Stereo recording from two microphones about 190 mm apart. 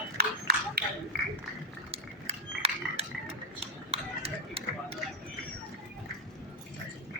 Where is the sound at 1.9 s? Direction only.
30° right (ahead or behind).